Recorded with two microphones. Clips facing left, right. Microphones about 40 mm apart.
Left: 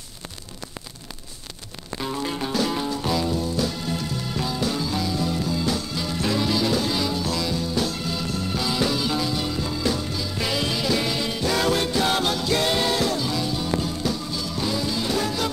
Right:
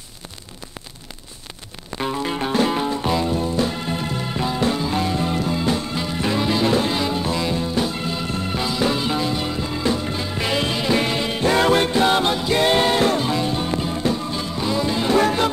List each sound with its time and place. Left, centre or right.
2.0 s music: right